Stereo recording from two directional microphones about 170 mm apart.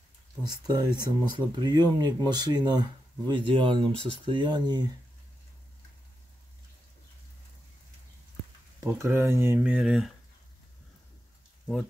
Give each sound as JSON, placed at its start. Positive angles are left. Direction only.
{"t": 0.4, "sound": "speech", "side_deg": -25}
{"t": 8.8, "sound": "speech", "side_deg": -15}